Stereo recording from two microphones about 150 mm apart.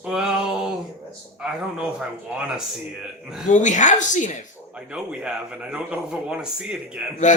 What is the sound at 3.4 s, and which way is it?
Speech, 55° left (ahead or behind).